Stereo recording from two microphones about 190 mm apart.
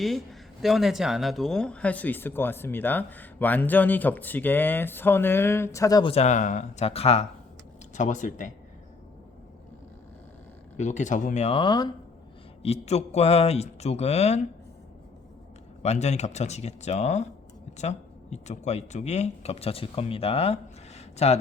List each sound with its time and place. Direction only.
0.6 s a man's voice: centre (ahead or behind); by 8.5 s 40° left (ahead or behind)
10.8 s a man's voice: 40° left (ahead or behind); by 11.9 s 25° left (ahead or behind)
12.6 s a man's voice: 35° left (ahead or behind)
15.8 s a man's voice: 35° left (ahead or behind)